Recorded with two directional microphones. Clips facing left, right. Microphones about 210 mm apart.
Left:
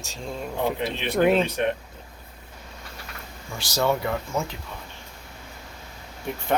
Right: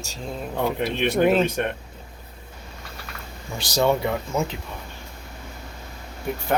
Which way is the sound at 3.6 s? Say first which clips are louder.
Right 3 dB; 15° right (ahead or behind).